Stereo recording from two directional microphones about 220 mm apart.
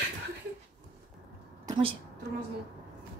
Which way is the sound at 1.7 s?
25° right (ahead or behind).